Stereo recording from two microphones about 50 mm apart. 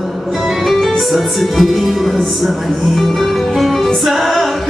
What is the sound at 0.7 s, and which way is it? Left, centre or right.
Music, centre.